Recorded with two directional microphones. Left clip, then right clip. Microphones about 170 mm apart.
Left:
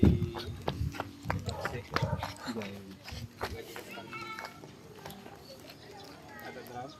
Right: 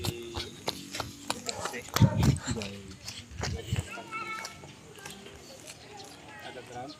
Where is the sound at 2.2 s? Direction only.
Centre (ahead or behind).